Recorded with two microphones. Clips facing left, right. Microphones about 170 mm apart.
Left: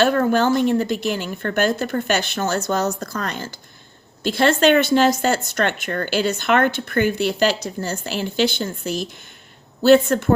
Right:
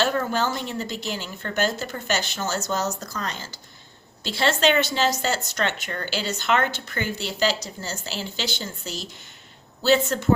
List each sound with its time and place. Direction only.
0.0 s a woman's voice: 55° left (ahead or behind)